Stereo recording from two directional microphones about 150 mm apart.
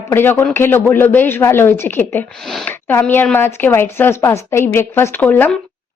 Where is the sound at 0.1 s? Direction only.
15° left (ahead or behind).